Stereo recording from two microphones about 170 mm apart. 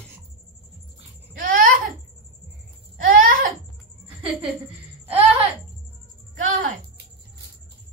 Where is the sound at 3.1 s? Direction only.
55° right (ahead or behind).